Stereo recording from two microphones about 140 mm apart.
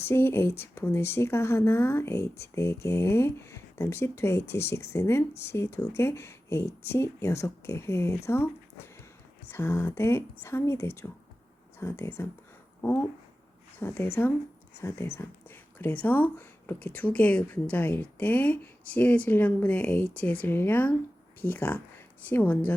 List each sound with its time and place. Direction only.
0.0 s speech: 15° left (ahead or behind)
9.5 s speech: 15° left (ahead or behind)